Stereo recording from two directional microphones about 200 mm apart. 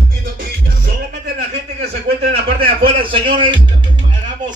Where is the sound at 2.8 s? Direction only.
25° right (ahead or behind).